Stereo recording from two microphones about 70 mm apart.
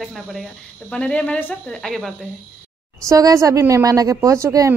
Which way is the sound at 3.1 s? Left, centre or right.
Right.